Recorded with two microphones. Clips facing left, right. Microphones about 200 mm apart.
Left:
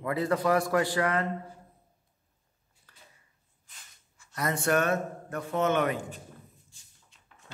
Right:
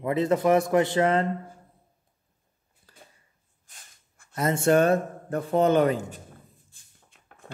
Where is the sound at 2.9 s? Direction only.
30° right (ahead or behind).